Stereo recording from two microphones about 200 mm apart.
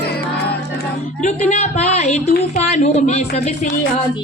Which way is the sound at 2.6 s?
30° left (ahead or behind).